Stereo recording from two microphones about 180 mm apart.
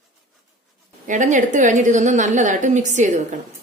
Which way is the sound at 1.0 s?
45° right (ahead or behind).